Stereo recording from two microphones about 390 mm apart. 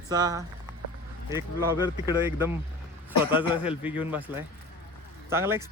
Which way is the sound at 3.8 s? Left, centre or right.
Centre.